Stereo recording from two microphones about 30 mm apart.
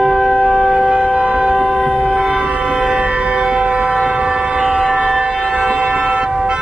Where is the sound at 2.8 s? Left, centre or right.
Right.